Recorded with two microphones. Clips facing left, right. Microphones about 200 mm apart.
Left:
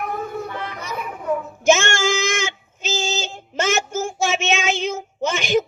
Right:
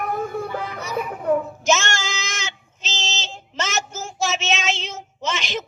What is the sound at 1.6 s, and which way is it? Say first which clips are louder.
Female singing: left 5 dB; 50° left (ahead or behind).